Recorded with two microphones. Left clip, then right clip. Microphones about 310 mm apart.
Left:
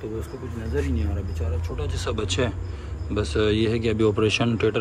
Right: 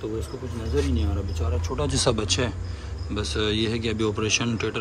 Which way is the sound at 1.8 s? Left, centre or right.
Centre.